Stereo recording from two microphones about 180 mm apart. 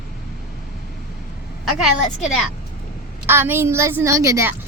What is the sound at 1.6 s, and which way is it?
Speech, centre (ahead or behind).